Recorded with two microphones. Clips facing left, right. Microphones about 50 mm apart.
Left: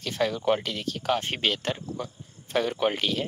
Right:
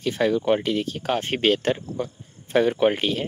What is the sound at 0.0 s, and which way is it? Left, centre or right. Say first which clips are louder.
Speech: right 5 dB; centre.